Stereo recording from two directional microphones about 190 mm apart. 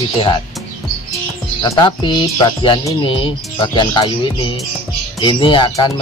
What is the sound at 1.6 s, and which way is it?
Speech, 25° left (ahead or behind).